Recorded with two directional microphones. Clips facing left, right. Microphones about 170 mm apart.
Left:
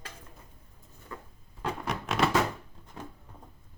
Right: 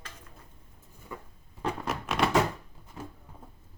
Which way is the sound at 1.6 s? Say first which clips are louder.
Right 1 dB; centre (ahead or behind).